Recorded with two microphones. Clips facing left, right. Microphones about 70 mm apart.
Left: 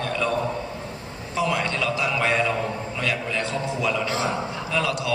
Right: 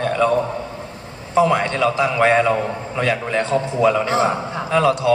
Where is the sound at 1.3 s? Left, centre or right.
Right.